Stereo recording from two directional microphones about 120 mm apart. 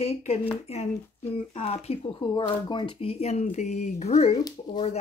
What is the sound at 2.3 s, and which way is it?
Speech, 40° left (ahead or behind).